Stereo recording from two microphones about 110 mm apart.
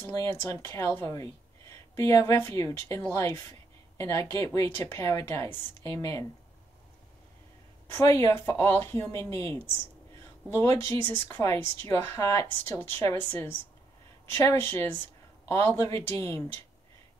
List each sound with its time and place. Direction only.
0.1 s speech: 30° left (ahead or behind)
7.9 s speech: 25° left (ahead or behind)